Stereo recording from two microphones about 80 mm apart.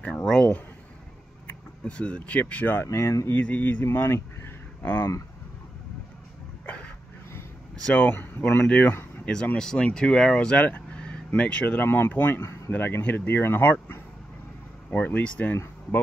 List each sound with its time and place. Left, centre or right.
0.0 s speech: centre; by 3.2 s left
3.3 s speech: centre
6.6 s a sound: centre
7.8 s speech: centre
8.6 s speech: centre; by 12.7 s left
12.7 s speech: left
15.5 s speech: left